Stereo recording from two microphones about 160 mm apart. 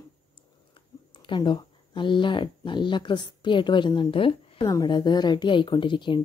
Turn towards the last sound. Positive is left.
turn(degrees=30)  # may be behind; listen again after turning